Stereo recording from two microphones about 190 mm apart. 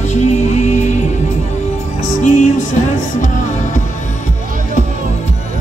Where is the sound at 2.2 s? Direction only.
40° left (ahead or behind).